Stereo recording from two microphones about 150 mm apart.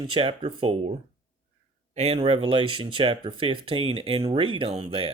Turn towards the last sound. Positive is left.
turn(degrees=-40)  # may be behind; listen again after turning